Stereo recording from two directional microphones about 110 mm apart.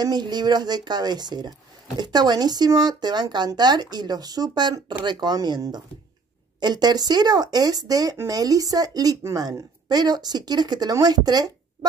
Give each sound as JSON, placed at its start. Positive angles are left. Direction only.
{"t": 0.0, "sound": "a woman's voice", "side_deg": -40}